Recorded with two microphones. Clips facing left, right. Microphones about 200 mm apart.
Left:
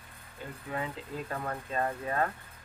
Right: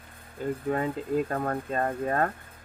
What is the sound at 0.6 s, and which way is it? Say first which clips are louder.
Speech: right 7 dB; 45° right (ahead or behind).